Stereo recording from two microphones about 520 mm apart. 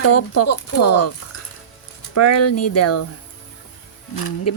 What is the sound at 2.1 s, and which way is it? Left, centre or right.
Speech, left.